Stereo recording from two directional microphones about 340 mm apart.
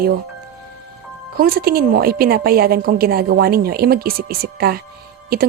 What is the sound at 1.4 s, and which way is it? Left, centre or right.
A woman's voice, right.